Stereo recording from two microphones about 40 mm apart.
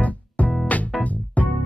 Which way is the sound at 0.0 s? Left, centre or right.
Left.